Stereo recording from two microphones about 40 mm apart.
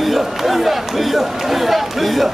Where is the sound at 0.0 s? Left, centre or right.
Centre.